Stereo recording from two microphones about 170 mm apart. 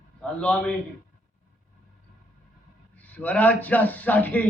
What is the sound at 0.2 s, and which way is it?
Speech, 5° left (ahead or behind).